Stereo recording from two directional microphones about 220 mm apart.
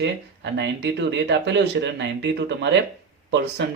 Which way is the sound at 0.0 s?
50° right (ahead or behind).